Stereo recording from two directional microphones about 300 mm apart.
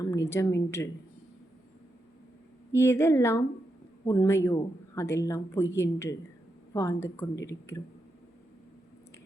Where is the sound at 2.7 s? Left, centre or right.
Centre.